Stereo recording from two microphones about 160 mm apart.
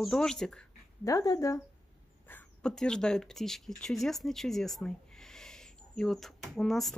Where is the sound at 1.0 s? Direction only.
25° left (ahead or behind).